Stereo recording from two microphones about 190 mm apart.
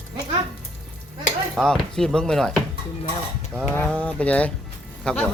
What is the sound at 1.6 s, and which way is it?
Speech, 5° left (ahead or behind).